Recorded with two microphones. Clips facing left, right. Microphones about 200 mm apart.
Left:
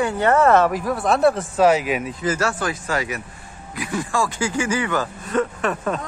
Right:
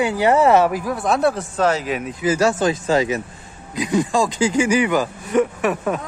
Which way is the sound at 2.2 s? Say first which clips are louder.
Right 5 dB; 15° right (ahead or behind).